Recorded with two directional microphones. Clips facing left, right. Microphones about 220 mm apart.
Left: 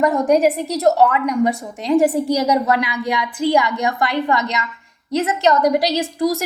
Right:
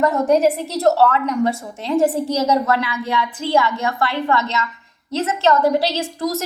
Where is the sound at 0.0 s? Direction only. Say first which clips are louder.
Left 1 dB; 15° left (ahead or behind).